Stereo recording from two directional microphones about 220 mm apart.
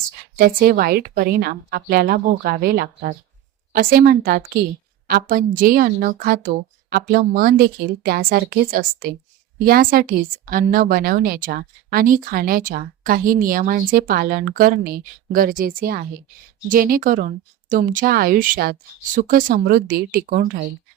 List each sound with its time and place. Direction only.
0.3 s a woman's voice: 40° right (ahead or behind)